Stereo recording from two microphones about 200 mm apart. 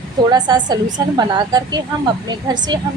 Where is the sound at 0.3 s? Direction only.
20° right (ahead or behind).